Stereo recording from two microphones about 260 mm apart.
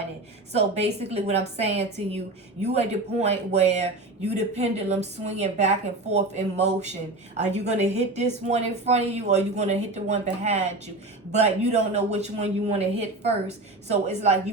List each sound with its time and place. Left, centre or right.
0.5 s a woman's voice: right